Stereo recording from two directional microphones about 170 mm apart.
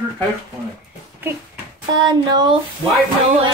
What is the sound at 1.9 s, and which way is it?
Child singing, 25° right (ahead or behind).